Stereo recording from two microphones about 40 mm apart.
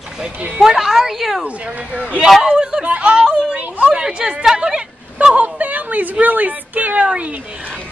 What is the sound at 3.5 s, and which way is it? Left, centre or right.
Speech, right.